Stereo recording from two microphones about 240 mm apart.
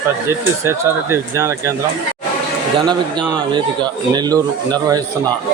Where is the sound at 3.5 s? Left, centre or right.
Centre.